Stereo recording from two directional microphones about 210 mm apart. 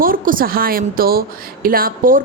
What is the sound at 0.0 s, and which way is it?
Speech, 40° right (ahead or behind).